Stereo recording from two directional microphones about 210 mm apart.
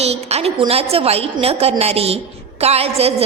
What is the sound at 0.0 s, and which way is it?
A woman's voice, 30° right (ahead or behind).